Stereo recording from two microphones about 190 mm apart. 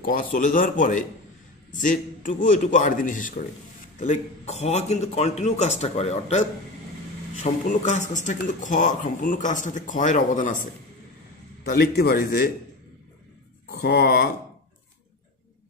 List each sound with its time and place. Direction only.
0.0 s a man's voice: 45° left (ahead or behind)
7.4 s speech: 40° left (ahead or behind)
11.7 s a man's voice: 55° left (ahead or behind)
13.7 s a man's voice: 55° left (ahead or behind)